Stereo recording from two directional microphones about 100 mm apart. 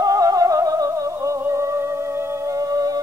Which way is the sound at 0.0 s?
35° right (ahead or behind).